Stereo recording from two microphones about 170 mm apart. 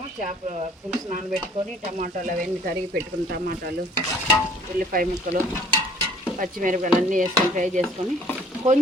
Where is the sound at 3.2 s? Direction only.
65° right (ahead or behind).